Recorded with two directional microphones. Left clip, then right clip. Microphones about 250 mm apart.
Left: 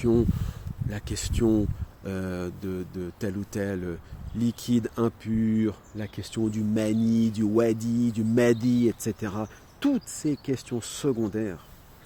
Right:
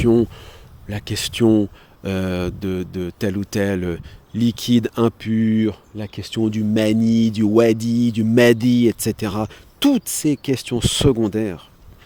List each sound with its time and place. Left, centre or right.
0.0 s speech: right